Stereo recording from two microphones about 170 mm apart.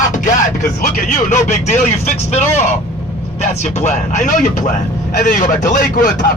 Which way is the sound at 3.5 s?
40° left (ahead or behind).